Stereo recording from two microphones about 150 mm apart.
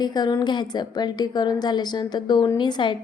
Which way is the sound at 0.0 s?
30° left (ahead or behind).